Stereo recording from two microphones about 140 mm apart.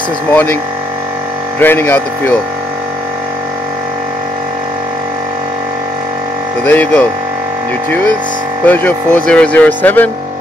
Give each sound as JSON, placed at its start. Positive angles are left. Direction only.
{"t": 0.3, "sound": "speech", "side_deg": 10}
{"t": 1.6, "sound": "speech", "side_deg": 15}
{"t": 6.6, "sound": "speech", "side_deg": 10}
{"t": 8.6, "sound": "speech", "side_deg": 10}